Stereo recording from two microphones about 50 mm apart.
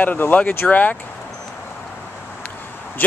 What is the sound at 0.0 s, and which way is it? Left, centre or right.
Speech, left.